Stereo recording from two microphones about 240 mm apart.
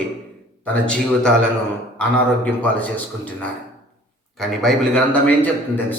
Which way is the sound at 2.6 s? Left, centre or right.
Centre.